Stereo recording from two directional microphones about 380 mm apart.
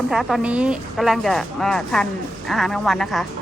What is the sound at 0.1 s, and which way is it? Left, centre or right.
A woman's voice, centre.